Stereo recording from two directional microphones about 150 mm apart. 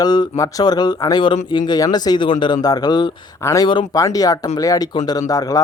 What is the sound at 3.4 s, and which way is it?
Speech, 20° left (ahead or behind).